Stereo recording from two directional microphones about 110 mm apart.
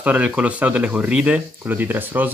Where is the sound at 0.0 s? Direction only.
15° right (ahead or behind).